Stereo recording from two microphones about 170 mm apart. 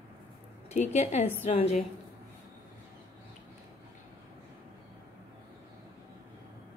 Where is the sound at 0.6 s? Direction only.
40° left (ahead or behind).